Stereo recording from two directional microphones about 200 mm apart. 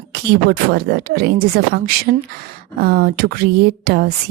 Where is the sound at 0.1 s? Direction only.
50° right (ahead or behind).